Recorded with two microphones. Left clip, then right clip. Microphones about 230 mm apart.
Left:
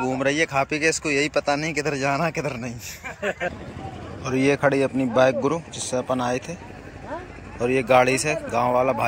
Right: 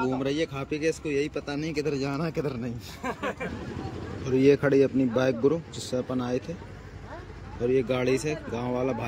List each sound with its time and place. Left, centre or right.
0.0 s speech: centre
0.7 s speech: left
1.4 s speech: centre
4.2 s speech: centre
7.7 s speech: centre